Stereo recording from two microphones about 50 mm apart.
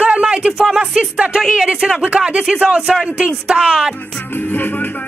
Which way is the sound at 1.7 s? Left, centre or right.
Centre.